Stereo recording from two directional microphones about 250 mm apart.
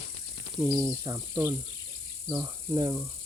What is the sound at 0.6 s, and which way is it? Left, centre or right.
Speech, centre.